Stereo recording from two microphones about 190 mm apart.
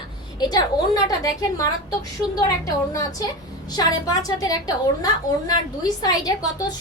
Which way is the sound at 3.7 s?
20° left (ahead or behind).